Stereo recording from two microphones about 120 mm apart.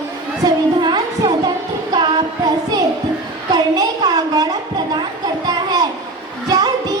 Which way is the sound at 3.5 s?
30° right (ahead or behind).